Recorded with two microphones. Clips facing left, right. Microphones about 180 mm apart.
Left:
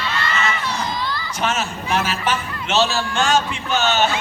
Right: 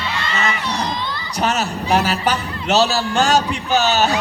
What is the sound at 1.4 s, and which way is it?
A man's voice, 35° right (ahead or behind).